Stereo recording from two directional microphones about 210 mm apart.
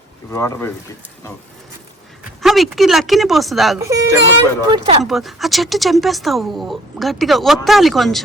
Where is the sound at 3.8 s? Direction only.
15° right (ahead or behind).